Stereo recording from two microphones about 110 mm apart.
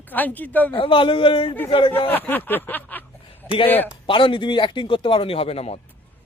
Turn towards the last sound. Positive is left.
turn(degrees=65)  # may be behind; listen again after turning